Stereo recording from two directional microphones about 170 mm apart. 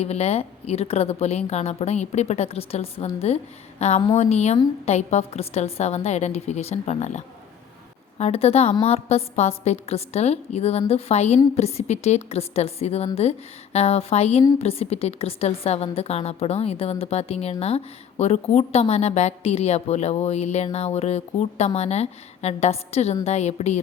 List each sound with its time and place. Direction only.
0.0 s a woman's voice: 40° left (ahead or behind)
8.2 s a woman's voice: 35° left (ahead or behind)